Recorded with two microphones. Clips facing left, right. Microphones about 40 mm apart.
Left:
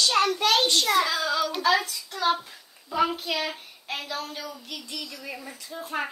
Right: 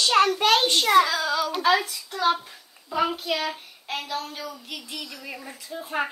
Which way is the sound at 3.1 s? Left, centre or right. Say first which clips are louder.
Right 2 dB; centre.